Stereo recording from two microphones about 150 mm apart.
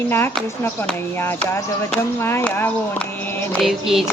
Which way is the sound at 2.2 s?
15° left (ahead or behind).